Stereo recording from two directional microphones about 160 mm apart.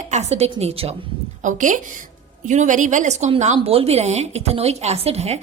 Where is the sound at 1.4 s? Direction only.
50° right (ahead or behind).